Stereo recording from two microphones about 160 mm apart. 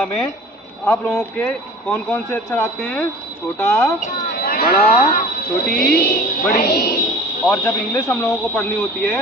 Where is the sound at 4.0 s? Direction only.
50° left (ahead or behind).